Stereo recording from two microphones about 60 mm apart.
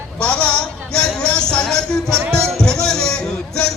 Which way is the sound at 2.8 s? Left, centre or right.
Centre.